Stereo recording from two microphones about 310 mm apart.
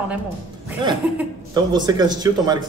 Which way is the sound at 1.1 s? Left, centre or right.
Centre.